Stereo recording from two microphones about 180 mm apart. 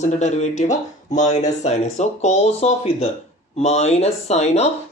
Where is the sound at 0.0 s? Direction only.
40° left (ahead or behind).